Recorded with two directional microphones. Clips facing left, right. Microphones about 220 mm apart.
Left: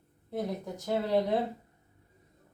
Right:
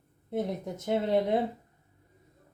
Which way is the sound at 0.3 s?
25° right (ahead or behind).